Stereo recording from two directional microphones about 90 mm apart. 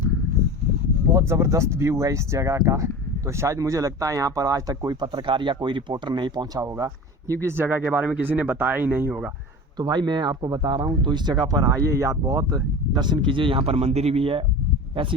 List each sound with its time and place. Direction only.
1.1 s speech: 30° right (ahead or behind); by 6.7 s 50° right (ahead or behind)
6.7 s speech: 35° right (ahead or behind)
9.7 s speech: 50° right (ahead or behind); by 14.4 s 90° right